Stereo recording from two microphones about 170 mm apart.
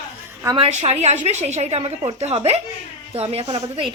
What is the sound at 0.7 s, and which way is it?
A woman's voice, 40° right (ahead or behind).